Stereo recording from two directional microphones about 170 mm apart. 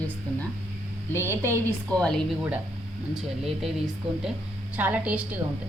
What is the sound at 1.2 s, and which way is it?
Speech, 15° right (ahead or behind).